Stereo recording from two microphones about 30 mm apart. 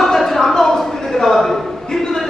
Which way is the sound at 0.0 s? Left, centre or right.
Centre.